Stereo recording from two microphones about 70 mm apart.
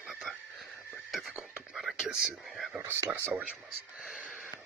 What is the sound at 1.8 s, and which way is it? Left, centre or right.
Speech, centre.